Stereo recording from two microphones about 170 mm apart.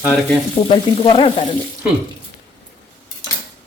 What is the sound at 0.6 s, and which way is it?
Frying, 35° left (ahead or behind).